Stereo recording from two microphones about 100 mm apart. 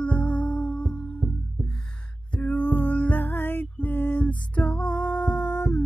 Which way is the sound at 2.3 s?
15° left (ahead or behind).